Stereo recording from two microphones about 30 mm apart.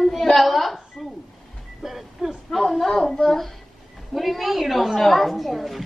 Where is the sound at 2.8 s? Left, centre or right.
Centre.